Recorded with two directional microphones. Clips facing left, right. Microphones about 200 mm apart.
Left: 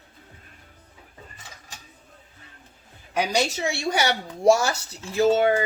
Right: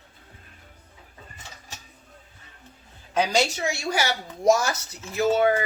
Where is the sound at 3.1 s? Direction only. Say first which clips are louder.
Right 1 dB; 15° left (ahead or behind).